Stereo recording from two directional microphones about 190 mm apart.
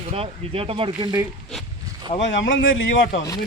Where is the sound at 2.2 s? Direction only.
75° left (ahead or behind).